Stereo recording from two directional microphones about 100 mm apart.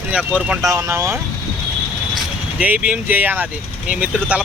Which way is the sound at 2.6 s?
15° right (ahead or behind).